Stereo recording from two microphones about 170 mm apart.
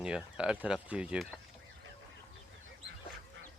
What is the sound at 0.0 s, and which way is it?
Speech, 5° right (ahead or behind).